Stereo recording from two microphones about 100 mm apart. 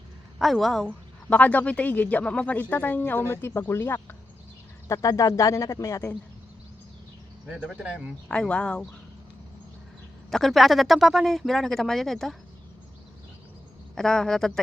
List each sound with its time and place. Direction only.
0.3 s speech: centre (ahead or behind)
1.3 s speech: 15° left (ahead or behind); by 6.1 s 30° left (ahead or behind)
7.5 s speech: 10° right (ahead or behind)
8.3 s speech: 10° left (ahead or behind)
10.3 s speech: centre (ahead or behind)
13.9 s speech: 5° left (ahead or behind)